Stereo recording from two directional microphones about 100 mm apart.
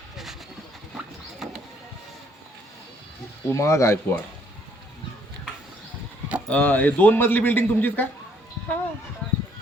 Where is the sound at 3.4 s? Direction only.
30° left (ahead or behind).